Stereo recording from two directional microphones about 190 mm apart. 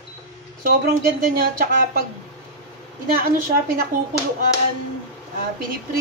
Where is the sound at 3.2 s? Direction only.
50° right (ahead or behind).